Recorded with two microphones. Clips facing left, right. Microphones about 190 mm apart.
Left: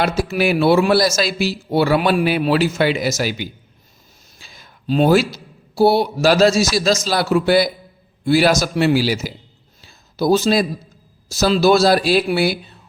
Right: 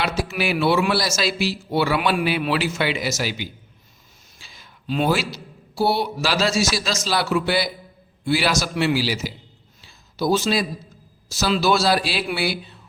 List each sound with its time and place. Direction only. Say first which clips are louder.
0.0 s a man's voice: left 6 dB; 40° left (ahead or behind)
9.8 s a sound: left 4 dB; 40° left (ahead or behind)
11.3 s a man's voice: left 6 dB; 40° left (ahead or behind)